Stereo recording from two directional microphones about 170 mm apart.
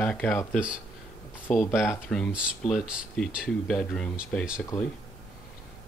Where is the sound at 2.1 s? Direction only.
Centre (ahead or behind).